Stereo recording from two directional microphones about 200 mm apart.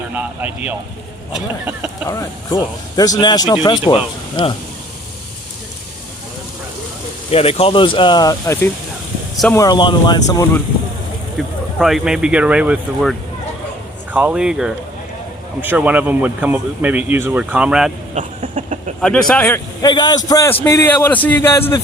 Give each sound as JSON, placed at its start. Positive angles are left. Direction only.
{"t": 0.1, "sound": "speech", "side_deg": -5}
{"t": 2.0, "sound": "speech", "side_deg": 20}
{"t": 7.3, "sound": "speech", "side_deg": 30}
{"t": 11.3, "sound": "speech", "side_deg": 0}
{"t": 18.1, "sound": "speech", "side_deg": -35}
{"t": 19.3, "sound": "a man's voice", "side_deg": 10}